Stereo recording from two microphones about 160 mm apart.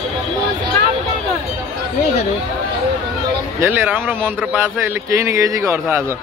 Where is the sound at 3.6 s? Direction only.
10° right (ahead or behind).